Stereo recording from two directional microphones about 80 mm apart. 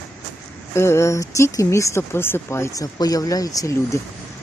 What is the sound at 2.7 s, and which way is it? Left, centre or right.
Speech, left.